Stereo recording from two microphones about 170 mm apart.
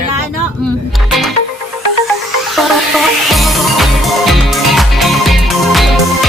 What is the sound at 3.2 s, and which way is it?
Music, centre (ahead or behind).